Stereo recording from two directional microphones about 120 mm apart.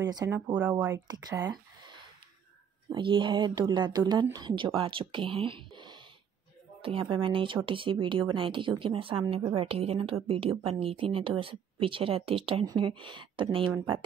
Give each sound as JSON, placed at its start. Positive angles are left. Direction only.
{"t": 0.0, "sound": "speech", "side_deg": -30}
{"t": 0.6, "sound": "speech", "side_deg": -15}
{"t": 1.0, "sound": "speech", "side_deg": -30}
{"t": 2.9, "sound": "speech", "side_deg": -45}